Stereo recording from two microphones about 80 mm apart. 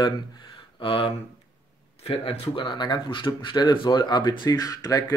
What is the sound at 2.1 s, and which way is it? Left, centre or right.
Speech, left.